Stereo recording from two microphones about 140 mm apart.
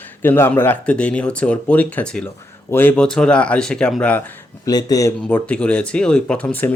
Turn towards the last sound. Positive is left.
turn(degrees=10)  # may be behind; listen again after turning